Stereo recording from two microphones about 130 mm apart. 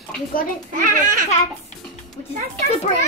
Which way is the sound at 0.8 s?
90° right.